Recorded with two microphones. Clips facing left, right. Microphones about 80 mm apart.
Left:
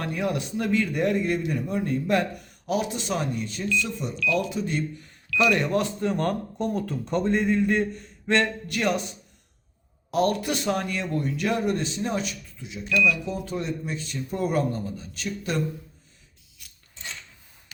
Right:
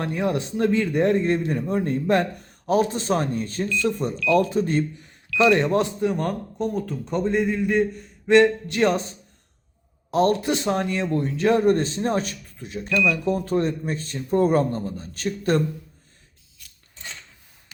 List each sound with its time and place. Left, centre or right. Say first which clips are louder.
0.0 s a man's voice: right 3 dB; right
4.9 s speech: right 3 dB; right
6.0 s a man's voice: right 1 dB; centre
8.6 s a man's voice: right 5 dB; right